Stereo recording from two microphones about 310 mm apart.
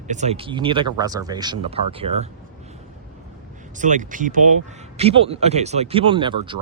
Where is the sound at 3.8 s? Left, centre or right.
Right.